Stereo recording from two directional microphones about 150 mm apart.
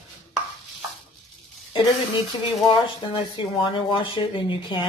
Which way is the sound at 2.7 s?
30° left (ahead or behind).